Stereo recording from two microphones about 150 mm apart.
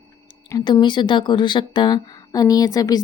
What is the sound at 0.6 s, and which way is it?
Speech, 30° left (ahead or behind).